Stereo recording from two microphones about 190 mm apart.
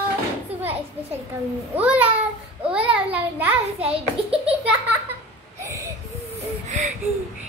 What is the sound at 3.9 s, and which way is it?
Speech, 30° right (ahead or behind).